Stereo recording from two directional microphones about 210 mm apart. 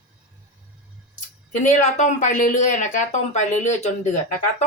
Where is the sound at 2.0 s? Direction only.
35° left (ahead or behind).